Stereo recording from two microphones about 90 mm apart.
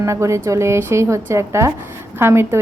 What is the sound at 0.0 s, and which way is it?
A woman's voice, 35° right (ahead or behind).